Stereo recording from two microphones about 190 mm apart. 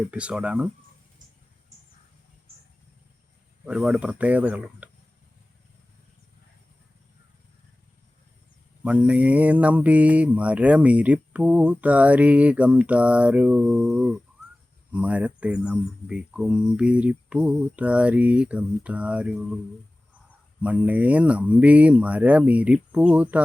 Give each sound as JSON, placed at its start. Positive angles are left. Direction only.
{"t": 0.1, "sound": "mantra", "side_deg": -5}
{"t": 3.7, "sound": "mantra", "side_deg": -5}
{"t": 8.8, "sound": "mantra", "side_deg": -5}
{"t": 20.6, "sound": "mantra", "side_deg": -5}